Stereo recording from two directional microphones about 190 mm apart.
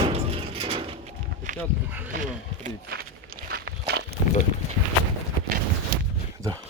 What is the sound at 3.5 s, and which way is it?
Walk, 60° right (ahead or behind).